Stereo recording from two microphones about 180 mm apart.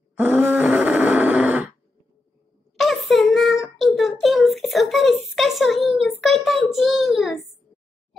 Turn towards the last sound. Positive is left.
turn(degrees=0)  # may be behind; listen again after turning